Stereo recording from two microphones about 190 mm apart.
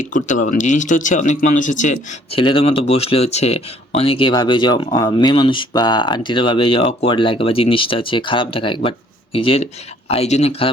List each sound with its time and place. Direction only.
0.0 s a man's voice: 40° left (ahead or behind)
2.4 s a man's voice: 25° left (ahead or behind)